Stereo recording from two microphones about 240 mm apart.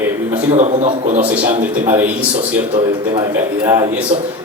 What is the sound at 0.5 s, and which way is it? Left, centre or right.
Speech, right.